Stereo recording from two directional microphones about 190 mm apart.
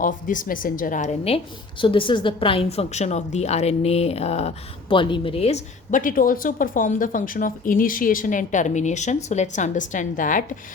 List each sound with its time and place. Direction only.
0.0 s a woman's voice: 45° left (ahead or behind)